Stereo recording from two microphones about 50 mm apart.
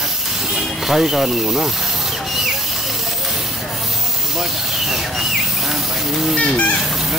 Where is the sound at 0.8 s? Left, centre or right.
Centre.